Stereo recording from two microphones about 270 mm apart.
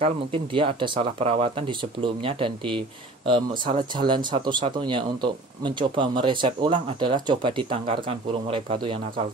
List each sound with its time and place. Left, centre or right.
0.0 s speech: centre